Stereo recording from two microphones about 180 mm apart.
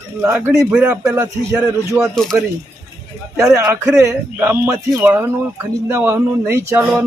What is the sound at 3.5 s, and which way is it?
Speech, 20° right (ahead or behind).